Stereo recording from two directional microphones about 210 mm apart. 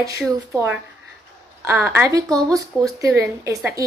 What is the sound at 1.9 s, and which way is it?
A woman's voice, 15° right (ahead or behind).